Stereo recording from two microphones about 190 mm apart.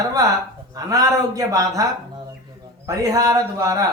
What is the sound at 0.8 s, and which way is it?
A man's voice, 20° right (ahead or behind).